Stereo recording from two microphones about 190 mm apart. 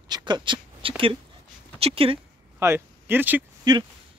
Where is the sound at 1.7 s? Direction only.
30° right (ahead or behind).